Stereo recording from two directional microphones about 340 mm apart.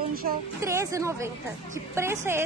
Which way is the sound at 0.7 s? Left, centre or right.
Centre.